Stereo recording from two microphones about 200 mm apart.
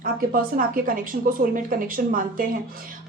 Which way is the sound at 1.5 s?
40° right (ahead or behind).